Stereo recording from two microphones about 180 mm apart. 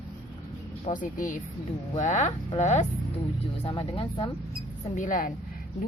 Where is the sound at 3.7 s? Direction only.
25° left (ahead or behind).